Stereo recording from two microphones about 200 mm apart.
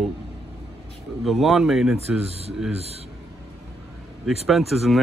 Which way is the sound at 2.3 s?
30° right (ahead or behind).